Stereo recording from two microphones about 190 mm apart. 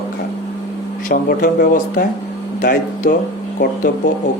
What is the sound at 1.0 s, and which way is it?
Speech, 45° left (ahead or behind).